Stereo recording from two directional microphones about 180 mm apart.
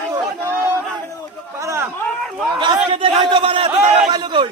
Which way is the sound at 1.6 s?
15° right (ahead or behind).